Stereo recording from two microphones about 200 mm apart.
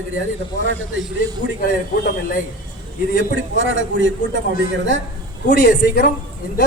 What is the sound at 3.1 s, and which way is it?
A man's voice, 65° right (ahead or behind).